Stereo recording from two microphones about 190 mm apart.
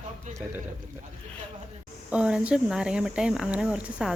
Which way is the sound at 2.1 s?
5° right (ahead or behind).